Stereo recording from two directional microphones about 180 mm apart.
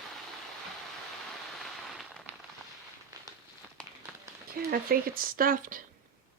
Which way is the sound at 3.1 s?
20° right (ahead or behind).